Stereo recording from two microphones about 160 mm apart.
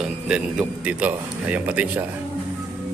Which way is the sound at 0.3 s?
5° right (ahead or behind).